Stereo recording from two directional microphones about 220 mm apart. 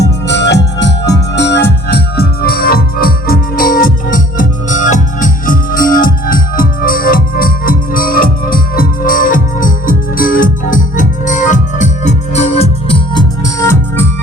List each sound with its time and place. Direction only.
0.0 s music: 50° left (ahead or behind); by 14.1 s 10° left (ahead or behind)